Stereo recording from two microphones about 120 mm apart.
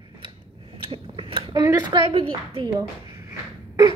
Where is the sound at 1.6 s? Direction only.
30° right (ahead or behind).